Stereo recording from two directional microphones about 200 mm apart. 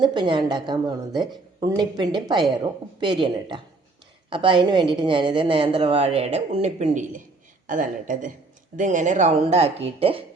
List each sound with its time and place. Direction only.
0.0 s a woman's voice: 25° right (ahead or behind)